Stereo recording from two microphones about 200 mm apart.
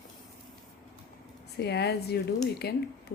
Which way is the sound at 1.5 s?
55° left (ahead or behind).